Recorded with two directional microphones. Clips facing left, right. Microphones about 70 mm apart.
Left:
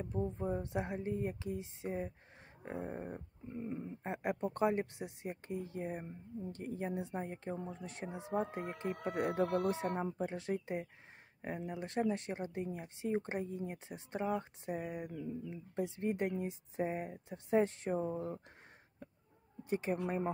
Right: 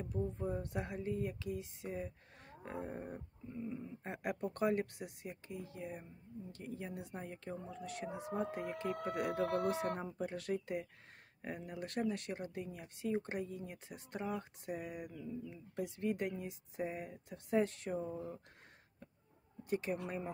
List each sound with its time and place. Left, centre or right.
0.1 s speech: left
0.6 s speech: left
2.6 s a sound: centre
3.5 s speech: left
4.0 s speech: left
19.7 s speech: left